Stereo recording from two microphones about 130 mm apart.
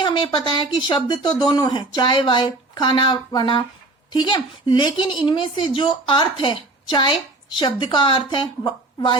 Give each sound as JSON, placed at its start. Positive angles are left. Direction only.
{"t": 0.0, "sound": "speech", "side_deg": 40}